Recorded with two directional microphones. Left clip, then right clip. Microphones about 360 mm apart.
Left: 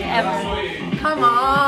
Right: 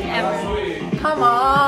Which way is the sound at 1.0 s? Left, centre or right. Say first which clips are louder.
Even; centre.